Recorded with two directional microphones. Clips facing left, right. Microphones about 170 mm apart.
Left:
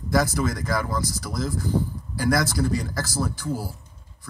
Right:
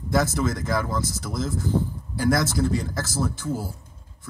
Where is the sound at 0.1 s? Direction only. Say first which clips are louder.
Even; 25° right (ahead or behind).